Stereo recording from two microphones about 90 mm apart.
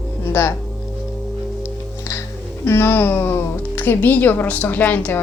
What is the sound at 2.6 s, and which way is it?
A woman's voice, 25° left (ahead or behind).